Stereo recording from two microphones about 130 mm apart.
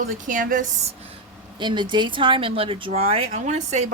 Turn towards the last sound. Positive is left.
turn(degrees=-60)  # may be behind; listen again after turning